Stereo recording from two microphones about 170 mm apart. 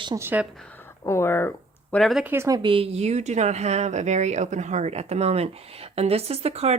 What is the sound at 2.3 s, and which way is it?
Speech, 20° right (ahead or behind).